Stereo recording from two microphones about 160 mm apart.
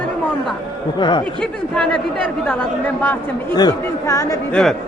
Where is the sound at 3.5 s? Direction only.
25° left (ahead or behind).